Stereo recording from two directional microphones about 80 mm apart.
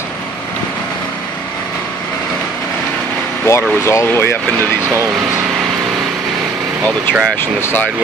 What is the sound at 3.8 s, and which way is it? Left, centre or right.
Speech, left.